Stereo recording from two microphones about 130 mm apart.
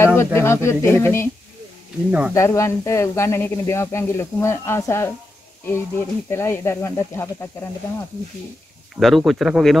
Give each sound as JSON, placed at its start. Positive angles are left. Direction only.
{"t": 0.0, "sound": "speech", "side_deg": 20}
{"t": 2.0, "sound": "speech", "side_deg": -10}
{"t": 2.3, "sound": "speech", "side_deg": 20}
{"t": 9.0, "sound": "speech", "side_deg": 0}